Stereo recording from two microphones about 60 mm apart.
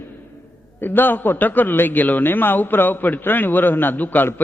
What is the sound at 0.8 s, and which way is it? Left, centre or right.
A man's voice, left.